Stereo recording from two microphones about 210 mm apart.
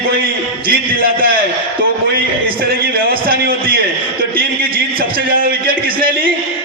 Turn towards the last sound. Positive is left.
turn(degrees=-45)  # may be behind; listen again after turning